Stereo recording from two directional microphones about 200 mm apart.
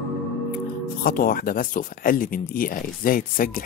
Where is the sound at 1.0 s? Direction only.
45° left (ahead or behind).